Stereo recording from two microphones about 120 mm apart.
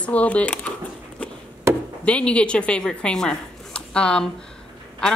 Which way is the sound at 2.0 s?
10° left (ahead or behind).